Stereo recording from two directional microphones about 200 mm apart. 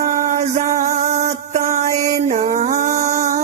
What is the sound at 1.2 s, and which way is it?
Mantra, 35° right (ahead or behind).